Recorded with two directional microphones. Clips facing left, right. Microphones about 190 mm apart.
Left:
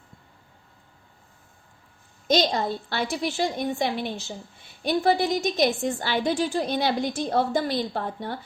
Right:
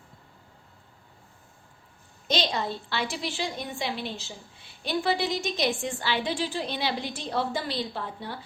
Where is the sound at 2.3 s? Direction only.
45° left (ahead or behind).